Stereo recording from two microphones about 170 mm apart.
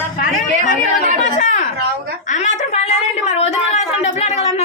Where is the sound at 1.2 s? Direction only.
45° left (ahead or behind).